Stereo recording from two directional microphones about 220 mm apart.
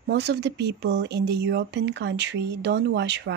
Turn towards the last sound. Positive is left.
turn(degrees=-50)  # may be behind; listen again after turning